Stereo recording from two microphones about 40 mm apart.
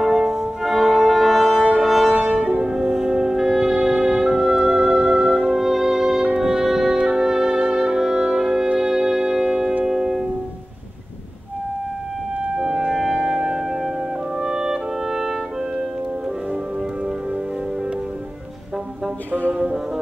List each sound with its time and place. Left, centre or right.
0.2 s music: centre
2.4 s music: right
2.7 s music: centre
12.7 s music: centre
14.4 s clarinet: centre
19.5 s music: centre